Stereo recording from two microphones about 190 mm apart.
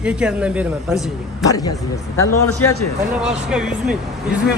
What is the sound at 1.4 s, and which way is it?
Speech, 20° left (ahead or behind).